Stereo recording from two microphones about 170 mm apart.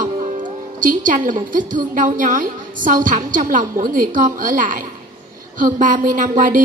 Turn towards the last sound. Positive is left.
turn(degrees=-50)  # may be behind; listen again after turning